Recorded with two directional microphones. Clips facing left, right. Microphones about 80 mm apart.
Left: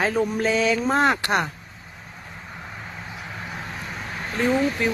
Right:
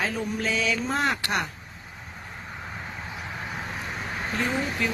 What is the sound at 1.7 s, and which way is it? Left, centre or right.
Vehicle, centre.